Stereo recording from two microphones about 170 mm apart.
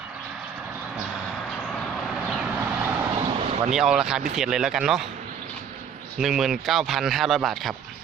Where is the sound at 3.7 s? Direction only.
5° right (ahead or behind).